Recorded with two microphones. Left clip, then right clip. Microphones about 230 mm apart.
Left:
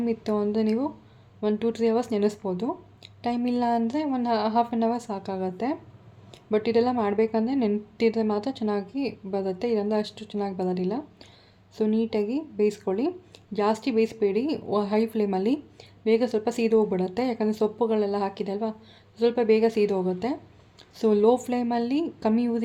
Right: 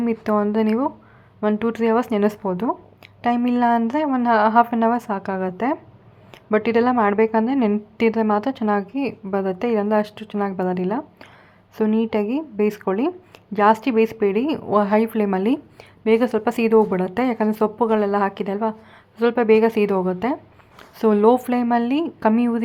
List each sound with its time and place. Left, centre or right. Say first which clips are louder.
0.0 s speech: right 6 dB; centre